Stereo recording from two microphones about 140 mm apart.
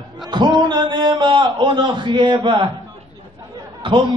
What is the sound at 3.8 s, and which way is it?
Speech, 35° right (ahead or behind).